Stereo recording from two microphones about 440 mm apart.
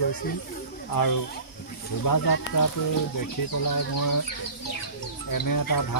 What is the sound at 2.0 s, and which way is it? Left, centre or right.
Speech, left.